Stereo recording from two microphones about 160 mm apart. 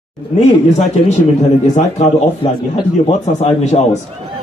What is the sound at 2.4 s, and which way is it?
Speech, 30° left (ahead or behind).